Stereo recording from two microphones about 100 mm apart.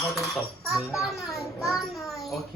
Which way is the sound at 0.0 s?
Centre (ahead or behind).